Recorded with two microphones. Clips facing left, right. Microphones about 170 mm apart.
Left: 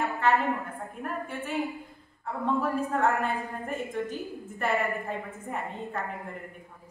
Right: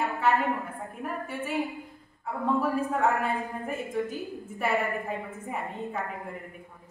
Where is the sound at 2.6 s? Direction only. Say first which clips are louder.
Left 1 dB; 5° right (ahead or behind).